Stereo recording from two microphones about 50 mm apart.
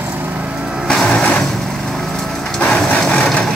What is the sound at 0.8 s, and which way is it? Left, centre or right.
Music, centre.